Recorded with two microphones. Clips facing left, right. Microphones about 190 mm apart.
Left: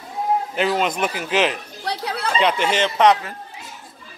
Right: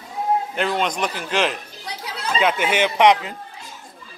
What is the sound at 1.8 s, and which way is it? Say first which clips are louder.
Chatter: left 7 dB; 60° left (ahead or behind).